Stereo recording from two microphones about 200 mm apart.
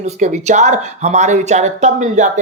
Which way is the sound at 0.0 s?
35° right (ahead or behind).